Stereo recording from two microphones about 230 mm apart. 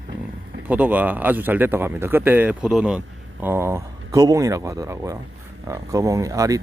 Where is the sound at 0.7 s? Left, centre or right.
Centre.